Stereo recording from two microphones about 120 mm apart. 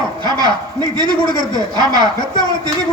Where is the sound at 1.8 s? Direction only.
35° right (ahead or behind).